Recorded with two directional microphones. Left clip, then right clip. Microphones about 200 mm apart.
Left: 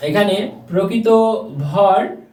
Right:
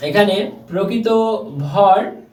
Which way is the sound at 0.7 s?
10° left (ahead or behind).